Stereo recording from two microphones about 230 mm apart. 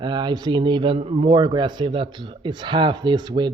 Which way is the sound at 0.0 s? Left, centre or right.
Centre.